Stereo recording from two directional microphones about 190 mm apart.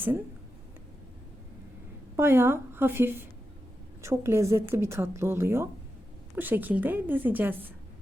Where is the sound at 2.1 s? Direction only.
10° right (ahead or behind).